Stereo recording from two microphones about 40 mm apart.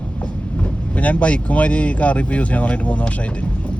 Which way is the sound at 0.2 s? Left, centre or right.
Left.